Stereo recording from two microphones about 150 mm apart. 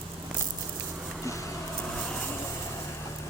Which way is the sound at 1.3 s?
20° left (ahead or behind).